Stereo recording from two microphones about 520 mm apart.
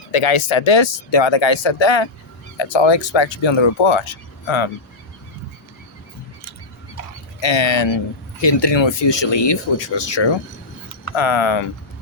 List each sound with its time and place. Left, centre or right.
0.1 s speech: left
7.4 s speech: left